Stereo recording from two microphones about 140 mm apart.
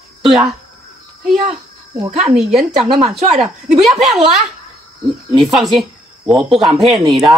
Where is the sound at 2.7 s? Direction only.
50° right (ahead or behind).